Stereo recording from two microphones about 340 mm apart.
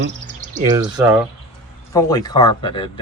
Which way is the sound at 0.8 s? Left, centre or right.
Centre.